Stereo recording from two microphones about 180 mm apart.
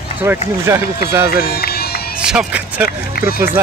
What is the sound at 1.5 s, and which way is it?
Run, 60° left (ahead or behind).